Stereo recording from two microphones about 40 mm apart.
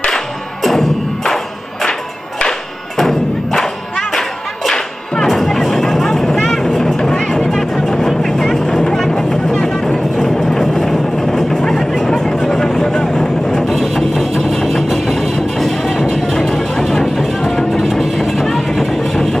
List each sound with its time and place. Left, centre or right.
0.1 s music: centre
3.0 s thump: centre
5.3 s a sound: centre
6.4 s vehicle: centre
6.8 s music: centre
8.2 s vehicle: centre
13.7 s music: centre
17.8 s a sound: centre